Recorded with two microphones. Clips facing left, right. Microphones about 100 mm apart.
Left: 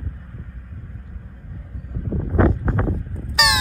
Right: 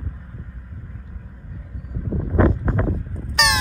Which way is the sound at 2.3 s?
15° left (ahead or behind).